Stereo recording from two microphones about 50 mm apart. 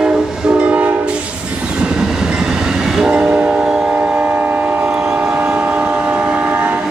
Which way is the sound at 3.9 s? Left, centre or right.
Right.